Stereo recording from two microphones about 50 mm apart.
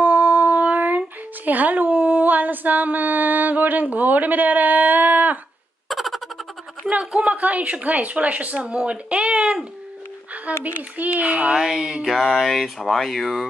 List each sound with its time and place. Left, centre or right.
0.0 s a sound: right
5.9 s a sound: centre
7.2 s speech: right
10.6 s speech: right
11.5 s speech: centre
12.1 s speech: centre